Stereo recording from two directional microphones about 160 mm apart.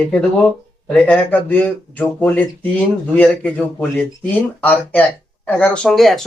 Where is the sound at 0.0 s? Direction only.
10° left (ahead or behind).